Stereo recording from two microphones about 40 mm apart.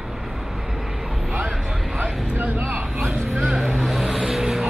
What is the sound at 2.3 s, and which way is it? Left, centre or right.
Vehicle, right.